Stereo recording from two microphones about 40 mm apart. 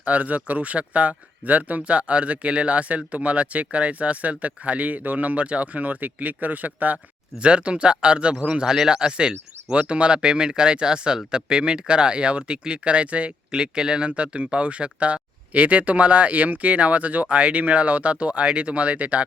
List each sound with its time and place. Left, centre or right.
0.0 s speech: right
7.4 s speech: right
8.7 s speech: centre; by 13.3 s right
13.5 s speech: centre; by 19.2 s right